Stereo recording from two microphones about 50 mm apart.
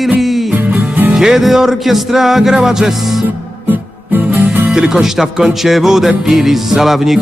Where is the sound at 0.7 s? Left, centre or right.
Right.